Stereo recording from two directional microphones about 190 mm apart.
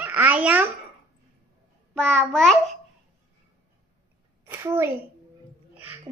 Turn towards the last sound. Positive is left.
turn(degrees=-15)  # may be behind; listen again after turning